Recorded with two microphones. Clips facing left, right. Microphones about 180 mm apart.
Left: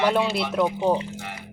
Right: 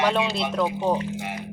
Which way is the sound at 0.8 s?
15° left (ahead or behind).